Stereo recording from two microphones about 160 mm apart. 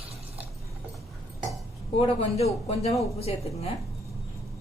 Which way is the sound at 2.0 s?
35° left (ahead or behind).